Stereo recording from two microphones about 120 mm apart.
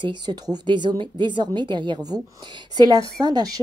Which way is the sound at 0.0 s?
35° right (ahead or behind).